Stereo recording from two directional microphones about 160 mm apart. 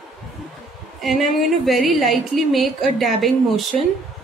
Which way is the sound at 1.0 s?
Centre (ahead or behind).